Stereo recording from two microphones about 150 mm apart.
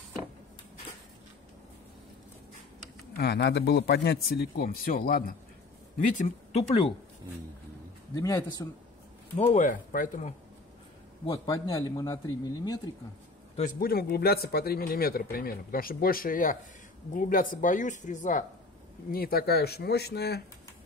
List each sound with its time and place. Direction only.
3.2 s speech: 90° left; by 5.3 s 75° left (ahead or behind)
6.1 s speech: 45° left (ahead or behind)
8.1 s a man's voice: 25° left (ahead or behind)
9.4 s speech: 45° left (ahead or behind)
9.7 s speech: 60° left (ahead or behind)
11.3 s a man's voice: 20° left (ahead or behind)
13.7 s speech: 85° left; by 18.4 s 55° left (ahead or behind)
19.1 s speech: 85° left